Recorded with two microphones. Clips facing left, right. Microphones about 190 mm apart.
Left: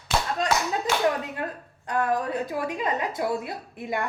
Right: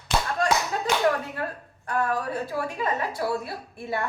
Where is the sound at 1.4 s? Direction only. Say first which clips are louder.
Even; 20° left (ahead or behind).